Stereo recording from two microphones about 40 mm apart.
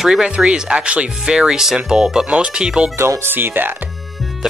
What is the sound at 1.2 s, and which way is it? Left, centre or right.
Speech, centre.